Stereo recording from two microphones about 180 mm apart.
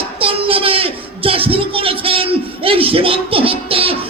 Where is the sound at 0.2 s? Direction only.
30° right (ahead or behind).